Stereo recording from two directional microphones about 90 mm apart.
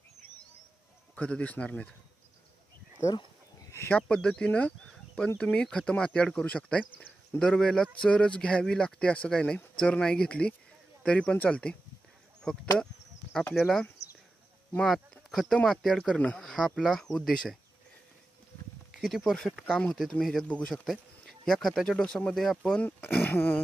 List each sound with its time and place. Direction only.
1.1 s speech: 15° left (ahead or behind)
3.9 s speech: 10° left (ahead or behind)
13.6 s speech: 5° left (ahead or behind)
14.9 s speech: 5° left (ahead or behind)
18.9 s speech: 5° right (ahead or behind)
19.3 s speech: 10° left (ahead or behind)
20.4 s speech: 15° left (ahead or behind)
20.7 s speech: 5° right (ahead or behind)
22.8 s speech: 20° left (ahead or behind)